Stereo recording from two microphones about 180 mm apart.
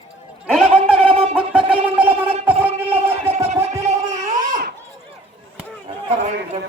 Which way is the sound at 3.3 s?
35° right (ahead or behind).